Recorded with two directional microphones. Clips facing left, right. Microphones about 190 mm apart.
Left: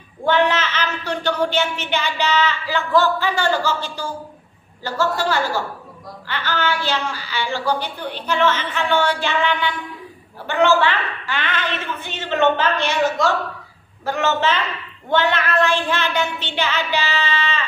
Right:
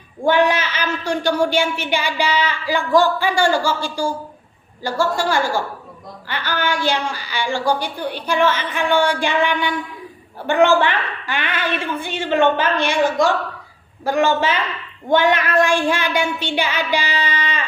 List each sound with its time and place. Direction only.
0.3 s a woman's voice: 10° right (ahead or behind)
10.8 s a woman's voice: 15° right (ahead or behind)